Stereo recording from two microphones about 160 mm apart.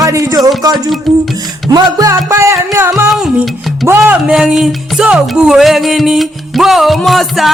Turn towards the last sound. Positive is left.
turn(degrees=0)  # may be behind; listen again after turning